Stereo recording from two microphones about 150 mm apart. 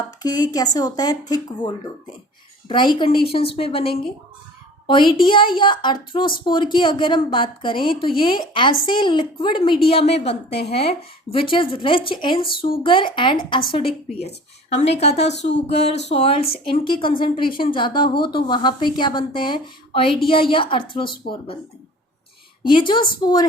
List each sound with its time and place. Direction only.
0.2 s a woman's voice: 25° left (ahead or behind)
22.6 s a woman's voice: 35° left (ahead or behind)